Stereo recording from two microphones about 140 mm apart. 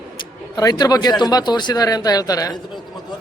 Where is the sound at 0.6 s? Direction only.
25° left (ahead or behind).